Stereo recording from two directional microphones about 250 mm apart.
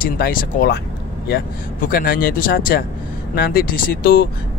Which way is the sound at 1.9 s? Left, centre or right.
Left.